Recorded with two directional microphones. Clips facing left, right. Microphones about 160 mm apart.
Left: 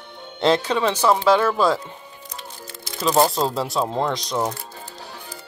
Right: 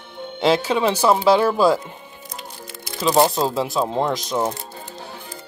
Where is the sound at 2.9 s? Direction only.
15° right (ahead or behind).